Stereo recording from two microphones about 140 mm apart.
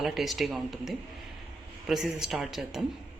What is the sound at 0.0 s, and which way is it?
A woman's voice, centre (ahead or behind).